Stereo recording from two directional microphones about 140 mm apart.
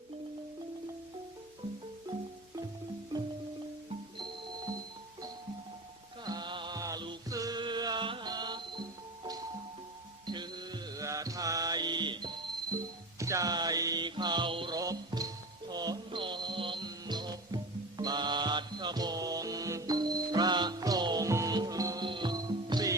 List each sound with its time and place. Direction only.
6.2 s music: 30° right (ahead or behind)
10.2 s music: 30° right (ahead or behind)
14.8 s music: 25° right (ahead or behind)